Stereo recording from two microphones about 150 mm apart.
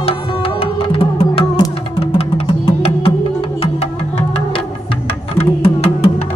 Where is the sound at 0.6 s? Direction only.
40° left (ahead or behind).